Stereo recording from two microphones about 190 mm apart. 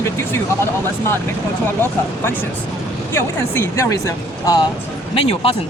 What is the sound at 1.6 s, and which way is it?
Speech, 10° left (ahead or behind).